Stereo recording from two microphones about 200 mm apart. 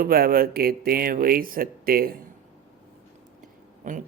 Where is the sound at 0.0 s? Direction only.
45° right (ahead or behind).